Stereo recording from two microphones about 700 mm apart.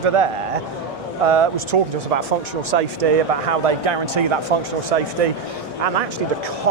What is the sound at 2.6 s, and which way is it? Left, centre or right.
Speech, right.